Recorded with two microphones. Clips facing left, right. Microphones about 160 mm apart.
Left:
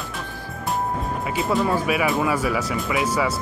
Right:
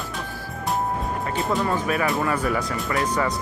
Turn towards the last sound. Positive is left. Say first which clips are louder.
# left 1 dB
turn(degrees=5)  # may be behind; listen again after turning